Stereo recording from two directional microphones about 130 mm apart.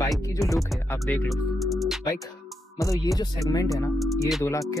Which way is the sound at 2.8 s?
25° left (ahead or behind).